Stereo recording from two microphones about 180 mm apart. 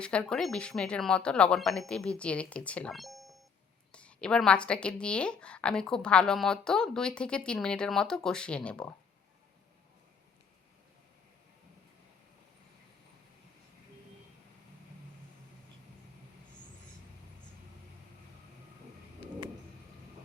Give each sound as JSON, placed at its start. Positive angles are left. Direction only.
{"t": 0.0, "sound": "a woman's voice", "side_deg": 5}